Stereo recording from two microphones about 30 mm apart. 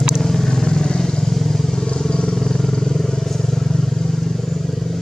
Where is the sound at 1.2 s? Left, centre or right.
Centre.